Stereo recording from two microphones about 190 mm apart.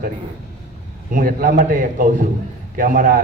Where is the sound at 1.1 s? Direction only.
45° right (ahead or behind).